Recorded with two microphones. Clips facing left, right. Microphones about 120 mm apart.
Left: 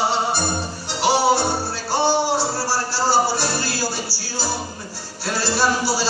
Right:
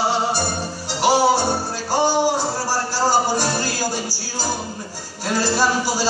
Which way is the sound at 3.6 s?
45° right (ahead or behind).